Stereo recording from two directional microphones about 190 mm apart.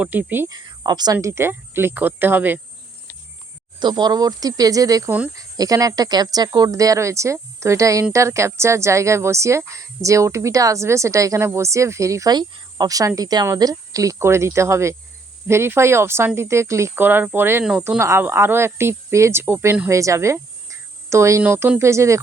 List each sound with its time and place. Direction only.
0.0 s a woman's voice: 10° right (ahead or behind)
3.8 s a woman's voice: 25° right (ahead or behind)